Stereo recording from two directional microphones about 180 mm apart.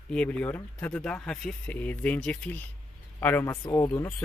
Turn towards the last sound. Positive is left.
turn(degrees=15)  # may be behind; listen again after turning